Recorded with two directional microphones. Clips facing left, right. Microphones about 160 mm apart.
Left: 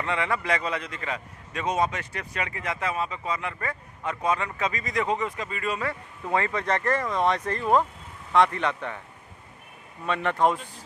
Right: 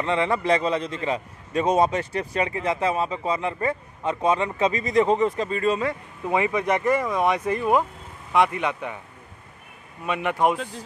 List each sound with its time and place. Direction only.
0.0 s a man's voice: 25° right (ahead or behind)
10.0 s speech: 10° right (ahead or behind)